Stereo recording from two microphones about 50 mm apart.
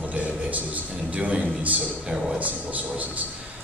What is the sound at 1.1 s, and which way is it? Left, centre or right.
Speech, right.